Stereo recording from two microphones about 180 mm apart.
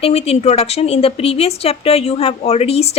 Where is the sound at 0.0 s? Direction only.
35° left (ahead or behind).